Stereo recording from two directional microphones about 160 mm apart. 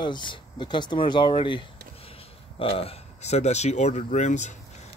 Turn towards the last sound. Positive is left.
turn(degrees=50)  # may be behind; listen again after turning